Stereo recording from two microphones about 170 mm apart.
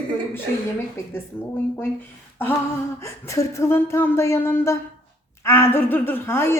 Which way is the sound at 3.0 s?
15° left (ahead or behind).